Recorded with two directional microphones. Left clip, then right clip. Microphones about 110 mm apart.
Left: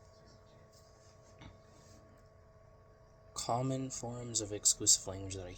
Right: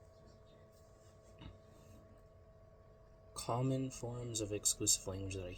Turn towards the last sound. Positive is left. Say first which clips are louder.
# left 1 dB
turn(degrees=-20)  # may be behind; listen again after turning